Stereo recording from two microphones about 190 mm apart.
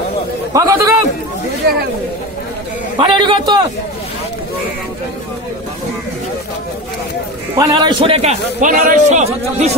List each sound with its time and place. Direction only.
0.5 s a man's voice: 15° right (ahead or behind)
3.0 s a man's voice: 25° right (ahead or behind)
7.5 s a man's voice: 20° right (ahead or behind); by 9.7 s 35° right (ahead or behind)